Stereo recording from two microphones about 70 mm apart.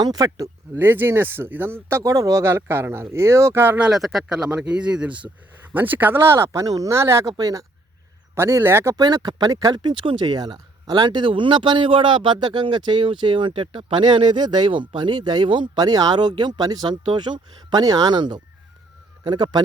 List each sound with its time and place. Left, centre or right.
0.0 s speech: right
0.8 s speech: right
2.4 s speech: right
3.9 s speech: centre
5.7 s speech: right
6.9 s speech: right
7.3 s speech: right
8.4 s speech: right
9.0 s speech: right